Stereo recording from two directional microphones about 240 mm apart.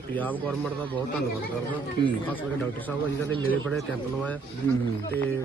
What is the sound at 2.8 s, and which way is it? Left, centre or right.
Speech, centre.